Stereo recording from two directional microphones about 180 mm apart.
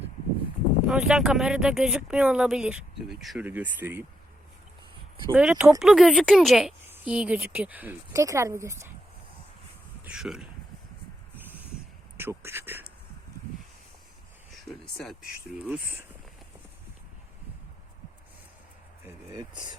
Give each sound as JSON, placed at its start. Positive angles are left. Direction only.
{"t": 0.9, "sound": "speech", "side_deg": -5}
{"t": 5.3, "sound": "a woman's voice", "side_deg": -5}
{"t": 10.0, "sound": "speech", "side_deg": -5}
{"t": 11.3, "sound": "a sound", "side_deg": -10}
{"t": 12.1, "sound": "a woman's voice", "side_deg": -15}
{"t": 14.7, "sound": "a woman's voice", "side_deg": 0}
{"t": 19.0, "sound": "speech", "side_deg": -20}